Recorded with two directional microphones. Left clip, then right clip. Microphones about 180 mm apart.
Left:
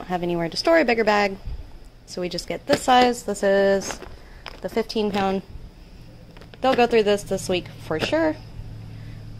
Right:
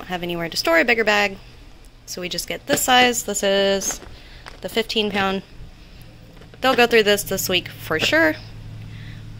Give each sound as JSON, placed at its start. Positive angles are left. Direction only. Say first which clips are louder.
{"t": 0.0, "sound": "a woman's voice", "louder": "left 1 dB", "side_deg": 15}
{"t": 4.6, "sound": "a woman's voice", "louder": "right 3 dB", "side_deg": 10}
{"t": 6.6, "sound": "a woman's voice", "louder": "right 3 dB", "side_deg": 5}